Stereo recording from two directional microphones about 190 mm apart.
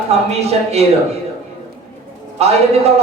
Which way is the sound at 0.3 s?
35° right (ahead or behind).